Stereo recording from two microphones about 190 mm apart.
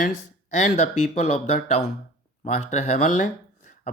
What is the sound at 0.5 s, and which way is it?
Speech, 40° left (ahead or behind).